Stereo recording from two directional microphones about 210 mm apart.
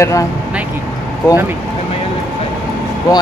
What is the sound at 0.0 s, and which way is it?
Speech, 15° left (ahead or behind).